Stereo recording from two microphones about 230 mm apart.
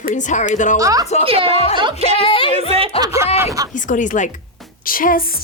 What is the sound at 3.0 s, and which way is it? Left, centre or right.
Speech, centre.